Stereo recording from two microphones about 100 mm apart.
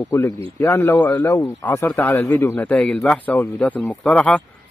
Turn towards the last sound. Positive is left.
turn(degrees=15)  # may be behind; listen again after turning